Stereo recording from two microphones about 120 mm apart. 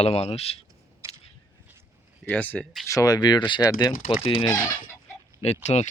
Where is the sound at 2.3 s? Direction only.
10° left (ahead or behind).